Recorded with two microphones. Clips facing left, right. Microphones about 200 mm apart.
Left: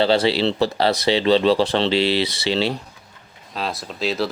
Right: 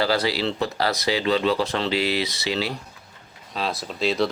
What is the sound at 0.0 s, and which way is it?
Speech, 25° left (ahead or behind).